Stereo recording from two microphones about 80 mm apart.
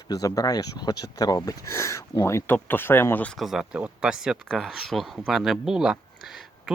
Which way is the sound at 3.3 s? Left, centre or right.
Centre.